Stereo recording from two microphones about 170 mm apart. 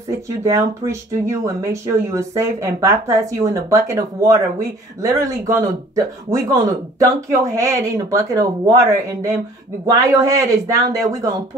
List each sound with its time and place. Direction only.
0.4 s speech: 15° right (ahead or behind)
9.8 s speech: 20° right (ahead or behind)